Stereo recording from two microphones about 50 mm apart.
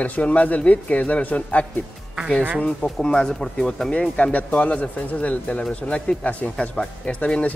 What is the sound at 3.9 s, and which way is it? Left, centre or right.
Speech, left.